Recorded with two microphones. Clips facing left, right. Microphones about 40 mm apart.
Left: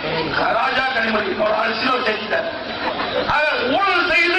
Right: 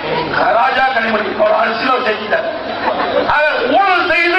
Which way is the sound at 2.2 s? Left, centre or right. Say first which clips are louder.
Right 5 dB; centre.